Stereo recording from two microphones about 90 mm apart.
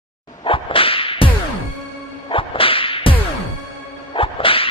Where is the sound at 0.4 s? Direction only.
80° left.